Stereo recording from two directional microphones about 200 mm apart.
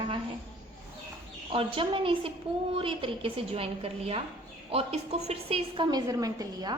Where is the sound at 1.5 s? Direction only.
25° right (ahead or behind).